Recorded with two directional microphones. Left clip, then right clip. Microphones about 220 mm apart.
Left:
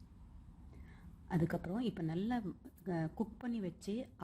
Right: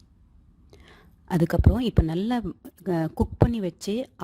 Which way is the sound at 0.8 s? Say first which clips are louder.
Right 13 dB; 50° right (ahead or behind).